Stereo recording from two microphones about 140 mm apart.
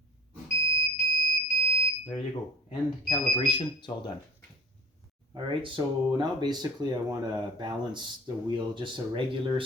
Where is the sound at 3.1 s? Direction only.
35° left (ahead or behind).